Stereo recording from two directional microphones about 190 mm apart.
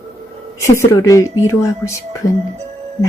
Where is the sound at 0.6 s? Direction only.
15° left (ahead or behind).